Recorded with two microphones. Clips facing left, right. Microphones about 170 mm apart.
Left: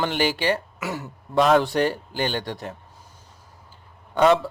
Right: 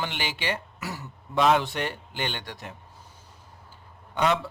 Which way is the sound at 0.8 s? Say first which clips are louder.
Left 6 dB; 85° left.